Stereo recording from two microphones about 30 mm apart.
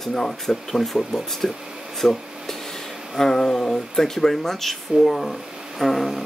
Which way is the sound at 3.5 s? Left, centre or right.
Centre.